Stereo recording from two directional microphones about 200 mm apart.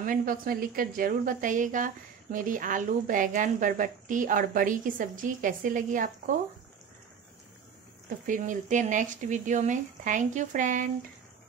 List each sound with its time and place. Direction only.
0.0 s a woman's voice: 45° right (ahead or behind)
8.3 s a woman's voice: 40° right (ahead or behind)